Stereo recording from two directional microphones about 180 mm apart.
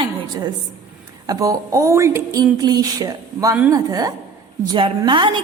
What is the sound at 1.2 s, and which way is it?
A woman's voice, 20° right (ahead or behind).